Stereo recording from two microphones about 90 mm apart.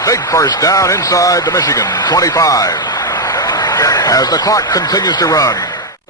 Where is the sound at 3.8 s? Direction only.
40° left (ahead or behind).